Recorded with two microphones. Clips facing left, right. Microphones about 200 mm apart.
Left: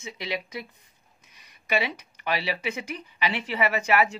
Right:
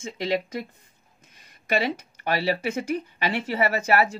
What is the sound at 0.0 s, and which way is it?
Speech, 50° right (ahead or behind).